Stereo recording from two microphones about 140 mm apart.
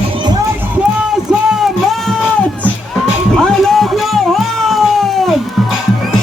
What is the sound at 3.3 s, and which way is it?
Cat, centre (ahead or behind).